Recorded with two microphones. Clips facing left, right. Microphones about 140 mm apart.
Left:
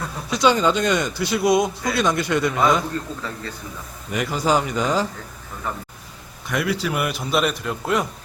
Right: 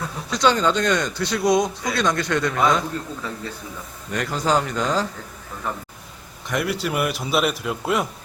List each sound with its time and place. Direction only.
0.3 s speech: 10° left (ahead or behind)
4.1 s speech: 5° left (ahead or behind)
6.5 s a man's voice: centre (ahead or behind)